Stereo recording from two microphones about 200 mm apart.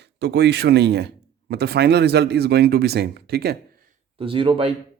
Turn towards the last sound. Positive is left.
turn(degrees=-25)  # may be behind; listen again after turning